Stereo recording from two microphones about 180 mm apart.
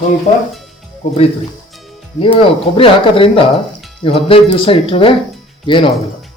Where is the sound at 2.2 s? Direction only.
30° left (ahead or behind).